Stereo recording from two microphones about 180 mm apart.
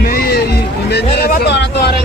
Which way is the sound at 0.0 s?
60° left (ahead or behind).